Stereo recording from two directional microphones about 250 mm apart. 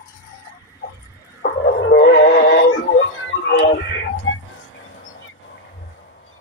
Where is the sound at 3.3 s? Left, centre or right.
Left.